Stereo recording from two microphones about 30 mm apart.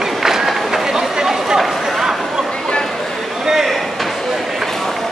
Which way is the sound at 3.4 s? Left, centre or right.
Centre.